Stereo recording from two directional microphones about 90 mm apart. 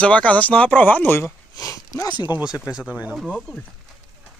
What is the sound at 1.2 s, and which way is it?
Sniff, 40° left (ahead or behind).